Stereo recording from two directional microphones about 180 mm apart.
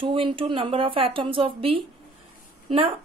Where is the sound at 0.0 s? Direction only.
30° right (ahead or behind).